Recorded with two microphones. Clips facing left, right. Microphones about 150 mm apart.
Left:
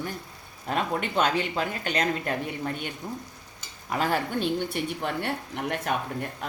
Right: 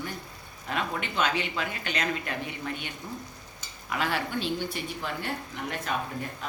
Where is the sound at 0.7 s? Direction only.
40° left (ahead or behind).